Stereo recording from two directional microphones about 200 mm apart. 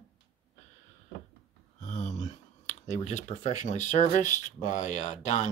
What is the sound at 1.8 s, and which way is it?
Speech, 35° left (ahead or behind).